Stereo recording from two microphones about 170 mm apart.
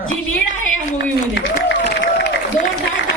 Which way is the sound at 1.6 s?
90° left.